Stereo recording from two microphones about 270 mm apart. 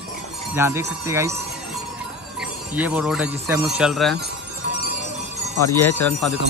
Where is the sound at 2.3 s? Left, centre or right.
Centre.